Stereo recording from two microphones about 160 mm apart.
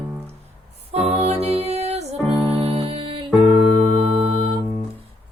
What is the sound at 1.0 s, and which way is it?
Music, 40° right (ahead or behind).